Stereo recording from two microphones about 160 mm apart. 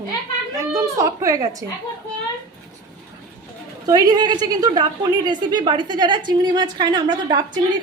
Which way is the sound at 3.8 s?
25° right (ahead or behind).